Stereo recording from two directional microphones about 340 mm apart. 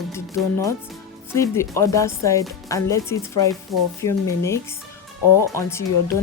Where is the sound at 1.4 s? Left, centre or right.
Centre.